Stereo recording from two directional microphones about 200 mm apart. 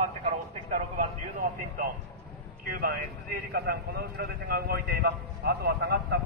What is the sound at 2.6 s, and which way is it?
A man's voice, 45° right (ahead or behind).